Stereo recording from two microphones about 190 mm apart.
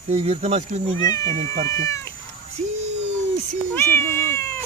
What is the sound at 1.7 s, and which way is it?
Cat, 15° left (ahead or behind).